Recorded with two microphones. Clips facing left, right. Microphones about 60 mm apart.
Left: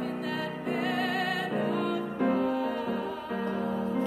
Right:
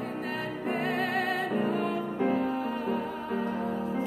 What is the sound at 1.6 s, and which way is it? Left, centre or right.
Music, right.